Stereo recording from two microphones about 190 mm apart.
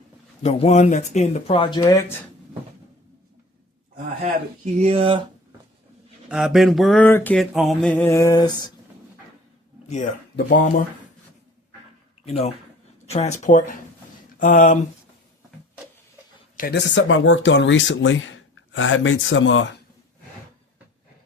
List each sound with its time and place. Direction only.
0.4 s speech: 35° left (ahead or behind); by 2.1 s 15° left (ahead or behind)
4.8 s speech: 30° right (ahead or behind)
6.2 s a sound: centre (ahead or behind); by 8.7 s 20° left (ahead or behind)
10.5 s speech: 45° left (ahead or behind)
12.2 s speech: 35° left (ahead or behind)
16.6 s speech: 50° left (ahead or behind)
16.9 s speech: 80° left